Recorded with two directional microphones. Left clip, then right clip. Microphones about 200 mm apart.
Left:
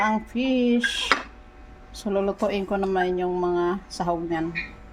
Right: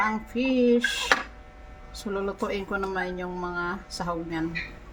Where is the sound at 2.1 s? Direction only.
30° left (ahead or behind).